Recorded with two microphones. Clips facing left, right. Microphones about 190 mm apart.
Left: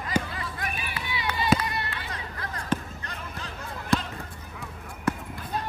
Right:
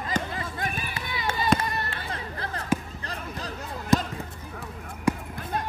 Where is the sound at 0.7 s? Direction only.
45° right (ahead or behind).